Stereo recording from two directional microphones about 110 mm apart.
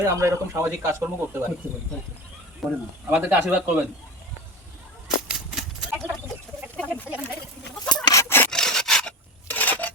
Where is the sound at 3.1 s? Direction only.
15° right (ahead or behind).